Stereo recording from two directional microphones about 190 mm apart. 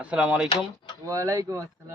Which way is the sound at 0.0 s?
5° right (ahead or behind).